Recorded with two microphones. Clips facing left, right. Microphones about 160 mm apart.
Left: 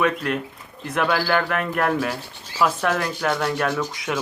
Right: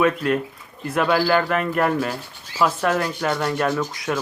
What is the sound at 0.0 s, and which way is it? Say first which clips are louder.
Speech: right 3 dB; centre (ahead or behind).